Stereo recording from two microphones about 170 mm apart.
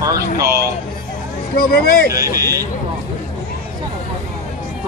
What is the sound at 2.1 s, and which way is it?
Speech, 20° right (ahead or behind).